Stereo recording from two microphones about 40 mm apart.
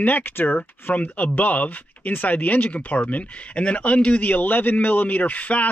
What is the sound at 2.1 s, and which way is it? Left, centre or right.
Speech, left.